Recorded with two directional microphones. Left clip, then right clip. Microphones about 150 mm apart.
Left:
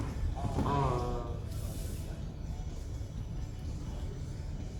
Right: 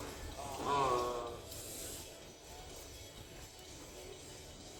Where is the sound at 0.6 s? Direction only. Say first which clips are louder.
Left 3 dB; 30° right (ahead or behind).